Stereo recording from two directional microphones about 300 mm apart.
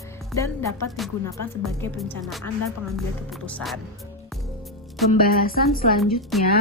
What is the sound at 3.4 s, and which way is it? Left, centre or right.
Speech, centre.